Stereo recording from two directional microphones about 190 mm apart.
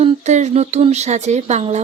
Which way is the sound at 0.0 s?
35° right (ahead or behind).